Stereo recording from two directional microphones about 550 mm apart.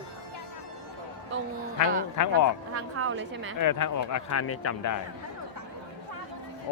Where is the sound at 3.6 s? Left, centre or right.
Left.